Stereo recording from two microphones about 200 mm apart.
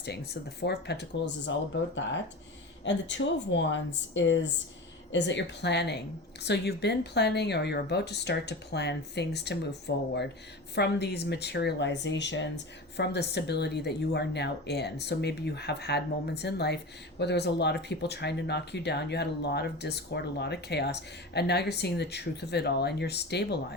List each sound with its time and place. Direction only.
0.6 s speech: 55° left (ahead or behind)
2.8 s speech: 65° left (ahead or behind)